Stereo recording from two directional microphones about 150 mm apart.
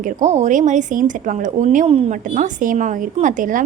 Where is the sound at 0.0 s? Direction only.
50° right (ahead or behind).